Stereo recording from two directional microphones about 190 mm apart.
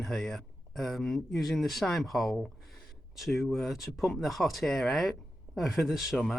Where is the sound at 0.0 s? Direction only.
Centre (ahead or behind).